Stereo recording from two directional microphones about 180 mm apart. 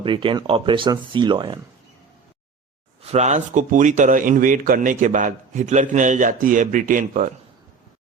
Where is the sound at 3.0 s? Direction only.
35° right (ahead or behind).